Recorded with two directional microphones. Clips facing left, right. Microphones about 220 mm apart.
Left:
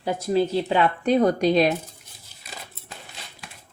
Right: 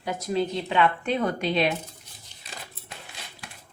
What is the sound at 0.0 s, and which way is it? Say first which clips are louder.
Speech: left 5 dB; 30° left (ahead or behind).